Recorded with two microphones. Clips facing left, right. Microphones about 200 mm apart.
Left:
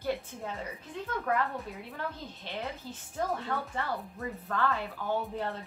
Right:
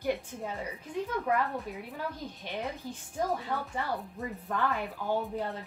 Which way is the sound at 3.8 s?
15° right (ahead or behind).